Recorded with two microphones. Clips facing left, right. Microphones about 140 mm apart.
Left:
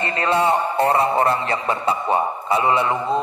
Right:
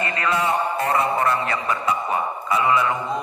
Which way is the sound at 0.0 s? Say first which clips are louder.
Left 3 dB; 30° left (ahead or behind).